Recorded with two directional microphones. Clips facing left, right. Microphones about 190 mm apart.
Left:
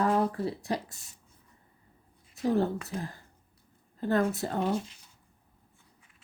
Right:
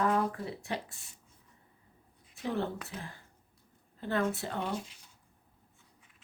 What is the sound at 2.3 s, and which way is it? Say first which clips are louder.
A woman's voice: left 7 dB; 40° left (ahead or behind).